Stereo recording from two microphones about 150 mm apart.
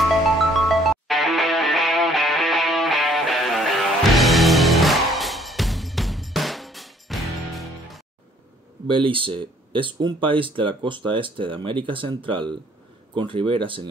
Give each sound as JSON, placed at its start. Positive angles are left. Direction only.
{"t": 0.4, "sound": "music", "side_deg": 0}
{"t": 8.8, "sound": "speech", "side_deg": -35}